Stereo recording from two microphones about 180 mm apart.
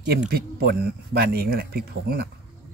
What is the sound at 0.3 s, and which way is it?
Speech, 60° right (ahead or behind).